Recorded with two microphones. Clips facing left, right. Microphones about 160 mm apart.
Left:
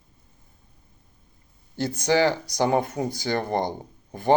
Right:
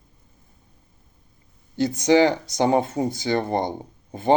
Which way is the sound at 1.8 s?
20° right (ahead or behind).